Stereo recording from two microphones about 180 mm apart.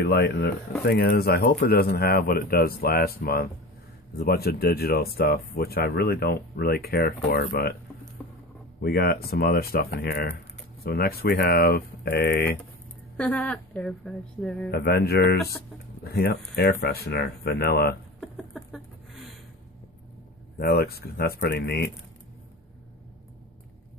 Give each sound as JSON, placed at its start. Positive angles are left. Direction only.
{"t": 0.0, "sound": "speech", "side_deg": 60}
{"t": 8.8, "sound": "speech", "side_deg": 60}
{"t": 13.2, "sound": "a woman's voice", "side_deg": 5}
{"t": 14.7, "sound": "speech", "side_deg": 65}
{"t": 18.2, "sound": "a sound", "side_deg": 0}
{"t": 20.5, "sound": "speech", "side_deg": 60}